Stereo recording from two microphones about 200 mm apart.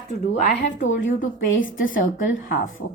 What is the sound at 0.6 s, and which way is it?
Speech, 65° left (ahead or behind).